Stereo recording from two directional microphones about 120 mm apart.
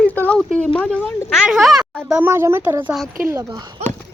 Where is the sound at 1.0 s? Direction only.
5° right (ahead or behind).